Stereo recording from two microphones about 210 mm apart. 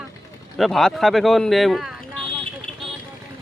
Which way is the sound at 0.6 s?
Centre (ahead or behind).